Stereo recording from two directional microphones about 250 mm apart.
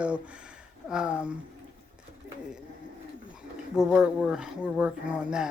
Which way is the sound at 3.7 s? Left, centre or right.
Centre.